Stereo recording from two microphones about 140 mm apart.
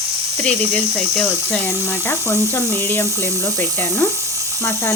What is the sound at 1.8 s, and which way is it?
Speech, 20° left (ahead or behind).